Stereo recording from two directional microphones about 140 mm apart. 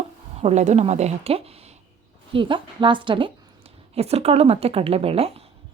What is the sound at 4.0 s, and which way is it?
A woman's voice, 50° right (ahead or behind).